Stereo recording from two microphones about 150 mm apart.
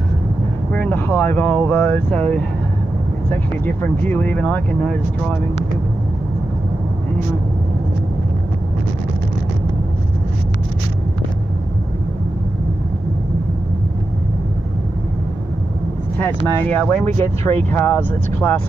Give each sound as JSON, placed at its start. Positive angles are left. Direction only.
{"t": 0.7, "sound": "speech", "side_deg": 10}
{"t": 16.7, "sound": "speech", "side_deg": 10}